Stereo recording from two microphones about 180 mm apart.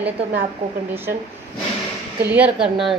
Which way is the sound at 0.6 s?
40° right (ahead or behind).